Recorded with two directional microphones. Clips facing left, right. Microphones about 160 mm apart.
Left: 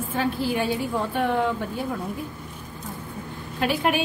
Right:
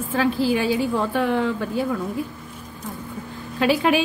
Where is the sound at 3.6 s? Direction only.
90° right.